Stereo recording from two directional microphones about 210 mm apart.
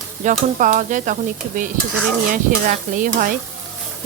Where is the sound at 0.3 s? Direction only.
35° right (ahead or behind).